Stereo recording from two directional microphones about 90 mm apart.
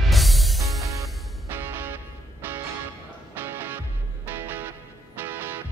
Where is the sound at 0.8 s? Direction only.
35° right (ahead or behind).